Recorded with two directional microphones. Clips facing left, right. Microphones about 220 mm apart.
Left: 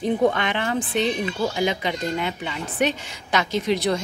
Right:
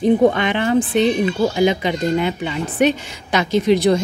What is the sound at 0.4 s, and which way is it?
Speech, 10° right (ahead or behind).